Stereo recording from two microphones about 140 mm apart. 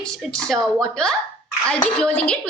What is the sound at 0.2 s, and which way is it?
A woman's voice, centre (ahead or behind).